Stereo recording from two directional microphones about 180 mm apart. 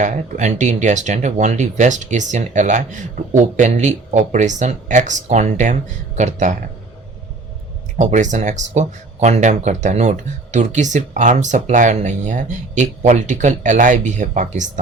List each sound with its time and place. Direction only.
0.0 s speech: 40° right (ahead or behind)
7.9 s speech: 40° right (ahead or behind)